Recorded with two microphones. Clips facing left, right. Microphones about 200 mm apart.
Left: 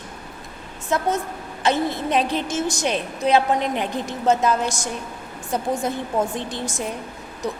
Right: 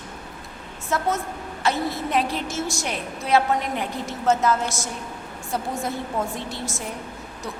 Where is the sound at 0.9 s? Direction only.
20° left (ahead or behind).